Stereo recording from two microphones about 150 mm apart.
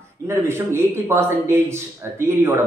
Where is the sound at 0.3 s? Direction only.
15° right (ahead or behind).